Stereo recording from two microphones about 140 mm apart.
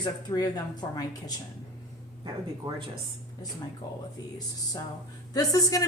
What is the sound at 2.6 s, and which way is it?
Speech, 30° right (ahead or behind).